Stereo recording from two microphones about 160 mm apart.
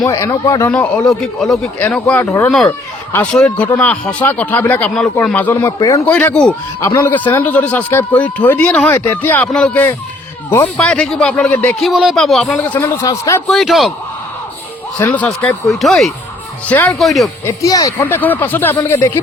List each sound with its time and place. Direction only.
0.0 s speech: 20° left (ahead or behind)
0.7 s a man's voice: 5° left (ahead or behind)
11.8 s speech: centre (ahead or behind)
12.8 s speech: 20° left (ahead or behind)
13.5 s speech: centre (ahead or behind)
14.9 s a man's voice: 10° left (ahead or behind)
17.4 s a man's voice: 20° left (ahead or behind)